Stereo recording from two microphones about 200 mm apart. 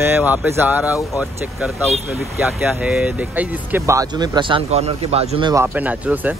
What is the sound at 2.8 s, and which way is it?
Speech, 5° right (ahead or behind).